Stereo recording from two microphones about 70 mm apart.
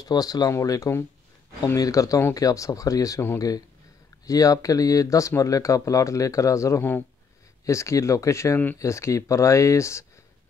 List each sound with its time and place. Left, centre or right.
0.0 s speech: left
0.5 s speech: left
1.8 s speech: left